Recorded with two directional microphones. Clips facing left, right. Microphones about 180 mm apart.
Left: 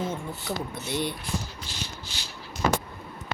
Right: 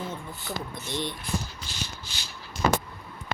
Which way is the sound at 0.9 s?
10° left (ahead or behind).